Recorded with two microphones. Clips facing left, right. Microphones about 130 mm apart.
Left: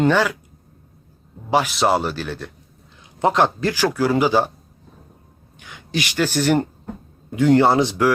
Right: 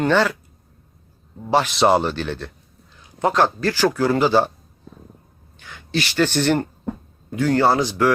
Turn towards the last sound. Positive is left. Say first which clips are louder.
# left 3 dB
turn(degrees=25)  # may be behind; listen again after turning